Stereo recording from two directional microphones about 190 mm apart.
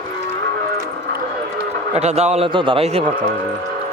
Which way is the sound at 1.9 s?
35° right (ahead or behind).